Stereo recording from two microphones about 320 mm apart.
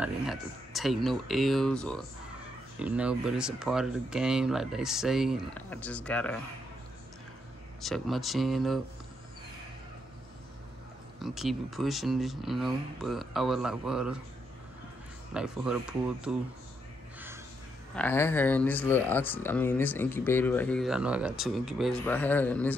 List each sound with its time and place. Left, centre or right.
0.0 s speech: centre
7.8 s speech: centre
11.1 s speech: centre
15.3 s speech: centre
17.9 s speech: centre